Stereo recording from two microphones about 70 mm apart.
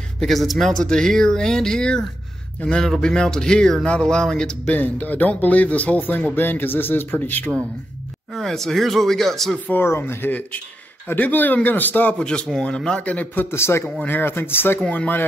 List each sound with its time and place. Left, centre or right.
0.2 s speech: centre
4.7 s speech: left
8.3 s speech: centre
9.8 s speech: left
12.2 s speech: centre
13.5 s speech: left